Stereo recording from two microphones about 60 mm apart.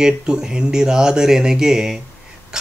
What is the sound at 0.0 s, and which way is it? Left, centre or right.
Speech, centre.